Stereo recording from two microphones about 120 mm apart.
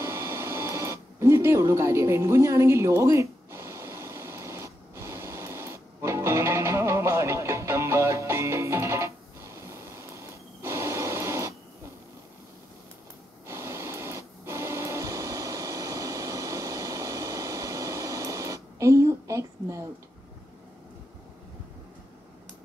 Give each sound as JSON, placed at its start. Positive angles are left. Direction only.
{"t": 0.0, "sound": "printer", "side_deg": -20}
{"t": 13.5, "sound": "printer", "side_deg": -20}